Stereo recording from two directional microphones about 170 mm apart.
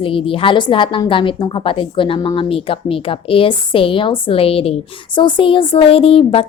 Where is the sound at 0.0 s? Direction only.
30° left (ahead or behind).